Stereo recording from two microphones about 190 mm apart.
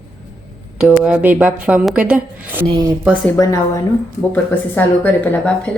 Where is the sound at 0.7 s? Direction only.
5° right (ahead or behind).